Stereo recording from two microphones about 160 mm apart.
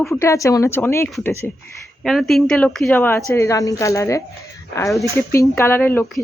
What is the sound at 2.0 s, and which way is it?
A woman's voice, centre (ahead or behind).